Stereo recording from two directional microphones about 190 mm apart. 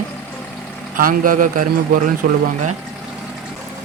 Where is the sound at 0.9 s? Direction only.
45° right (ahead or behind).